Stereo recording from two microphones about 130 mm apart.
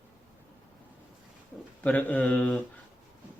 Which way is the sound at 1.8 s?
10° left (ahead or behind).